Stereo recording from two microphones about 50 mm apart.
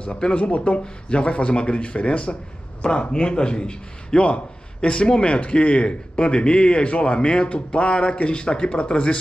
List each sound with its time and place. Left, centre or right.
0.0 s a man's voice: left